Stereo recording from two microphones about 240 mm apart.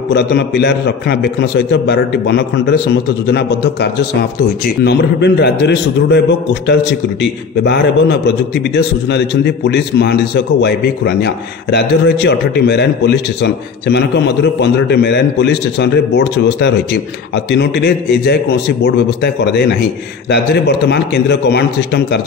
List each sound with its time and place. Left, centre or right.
0.1 s a man's voice: left